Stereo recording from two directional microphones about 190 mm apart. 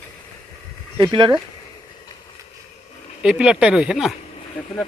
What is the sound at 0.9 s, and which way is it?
Speech, 25° right (ahead or behind).